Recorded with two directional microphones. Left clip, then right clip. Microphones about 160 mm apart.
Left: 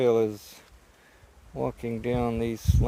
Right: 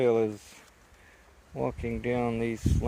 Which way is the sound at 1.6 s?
25° left (ahead or behind).